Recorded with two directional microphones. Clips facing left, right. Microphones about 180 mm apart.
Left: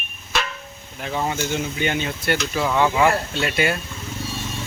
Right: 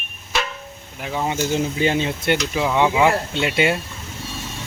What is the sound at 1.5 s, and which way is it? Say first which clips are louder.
Speech: right 4 dB; 30° right (ahead or behind).